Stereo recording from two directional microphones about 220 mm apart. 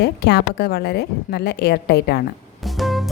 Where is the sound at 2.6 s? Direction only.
Centre (ahead or behind).